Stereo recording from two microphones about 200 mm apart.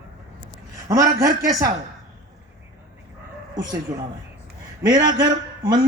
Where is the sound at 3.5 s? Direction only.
20° right (ahead or behind).